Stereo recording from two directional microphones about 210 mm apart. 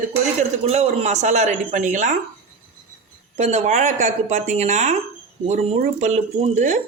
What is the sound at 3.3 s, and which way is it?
Speech, 35° right (ahead or behind).